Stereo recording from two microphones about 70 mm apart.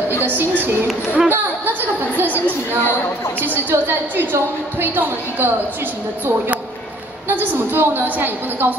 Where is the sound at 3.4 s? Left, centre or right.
Right.